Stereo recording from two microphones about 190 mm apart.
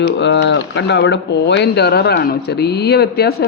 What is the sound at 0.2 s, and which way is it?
Speech, 70° left (ahead or behind).